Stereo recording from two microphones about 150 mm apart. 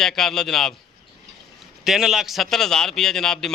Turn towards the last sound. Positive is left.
turn(degrees=5)  # may be behind; listen again after turning